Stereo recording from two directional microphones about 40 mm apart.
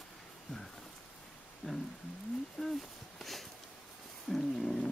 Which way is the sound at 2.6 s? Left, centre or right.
Centre.